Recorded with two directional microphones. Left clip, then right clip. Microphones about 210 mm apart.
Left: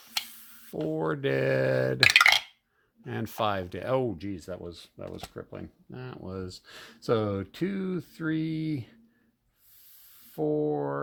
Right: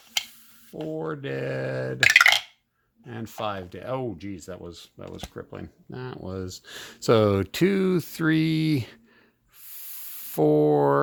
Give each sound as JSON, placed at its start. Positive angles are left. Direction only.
{"t": 0.9, "sound": "speech", "side_deg": 30}
{"t": 2.0, "sound": "a sound", "side_deg": 0}
{"t": 3.1, "sound": "speech", "side_deg": 25}
{"t": 5.9, "sound": "speech", "side_deg": -20}
{"t": 10.2, "sound": "speech", "side_deg": -50}